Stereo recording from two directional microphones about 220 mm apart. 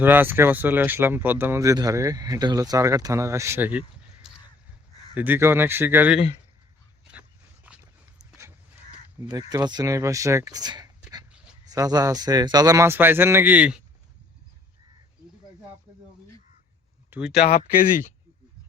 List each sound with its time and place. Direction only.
0.0 s speech: 10° right (ahead or behind)
7.1 s dog: 5° right (ahead or behind)
9.5 s speech: 20° right (ahead or behind)
17.1 s speech: 5° right (ahead or behind)